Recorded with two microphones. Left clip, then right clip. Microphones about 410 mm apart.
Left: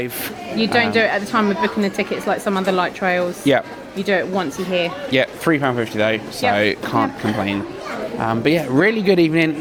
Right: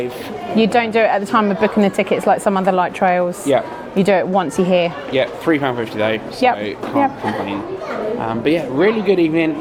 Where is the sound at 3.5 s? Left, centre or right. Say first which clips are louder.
Even; left.